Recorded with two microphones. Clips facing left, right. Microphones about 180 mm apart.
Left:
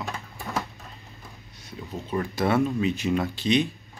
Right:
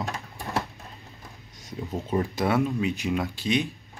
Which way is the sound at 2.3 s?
10° right (ahead or behind).